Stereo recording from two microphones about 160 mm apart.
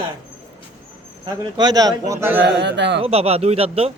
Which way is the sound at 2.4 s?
90° right.